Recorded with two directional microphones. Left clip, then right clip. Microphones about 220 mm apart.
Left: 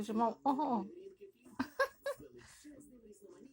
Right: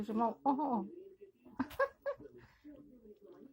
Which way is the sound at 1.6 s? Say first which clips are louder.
Even; centre (ahead or behind).